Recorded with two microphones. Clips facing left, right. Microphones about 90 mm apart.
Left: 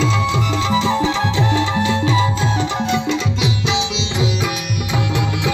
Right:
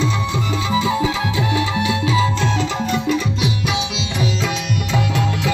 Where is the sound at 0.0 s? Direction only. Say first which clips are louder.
Left 3 dB; 90° left.